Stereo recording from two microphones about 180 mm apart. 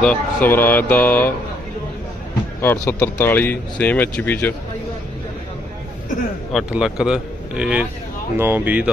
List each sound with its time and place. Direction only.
0.0 s speech: 10° left (ahead or behind)
2.6 s speech: 15° left (ahead or behind)
6.5 s speech: 5° right (ahead or behind)